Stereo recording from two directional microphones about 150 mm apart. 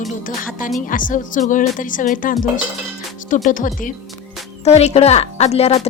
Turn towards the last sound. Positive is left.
turn(degrees=45)  # may be behind; listen again after turning